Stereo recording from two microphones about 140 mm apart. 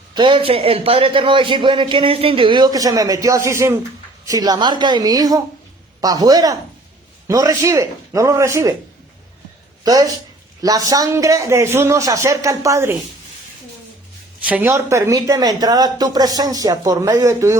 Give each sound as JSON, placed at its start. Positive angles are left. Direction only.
{"t": 0.1, "sound": "a man's voice", "side_deg": -35}
{"t": 9.8, "sound": "speech", "side_deg": -25}
{"t": 14.4, "sound": "speech", "side_deg": -10}